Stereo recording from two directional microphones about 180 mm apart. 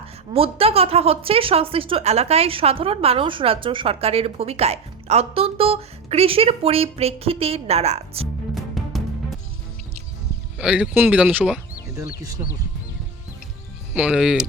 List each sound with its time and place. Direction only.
0.3 s a woman's voice: 30° right (ahead or behind)
8.5 s music: centre (ahead or behind)
10.6 s speech: 5° right (ahead or behind)
11.9 s speech: 20° right (ahead or behind)
13.9 s speech: 5° right (ahead or behind)